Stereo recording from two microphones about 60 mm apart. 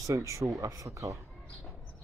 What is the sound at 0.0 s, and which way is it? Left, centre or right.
Speech, right.